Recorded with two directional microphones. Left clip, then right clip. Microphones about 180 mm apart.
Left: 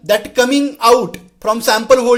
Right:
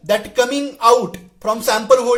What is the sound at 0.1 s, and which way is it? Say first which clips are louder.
Speech: left 3 dB; 30° left (ahead or behind).